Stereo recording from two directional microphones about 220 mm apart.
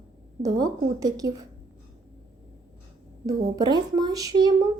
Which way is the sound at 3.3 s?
20° right (ahead or behind).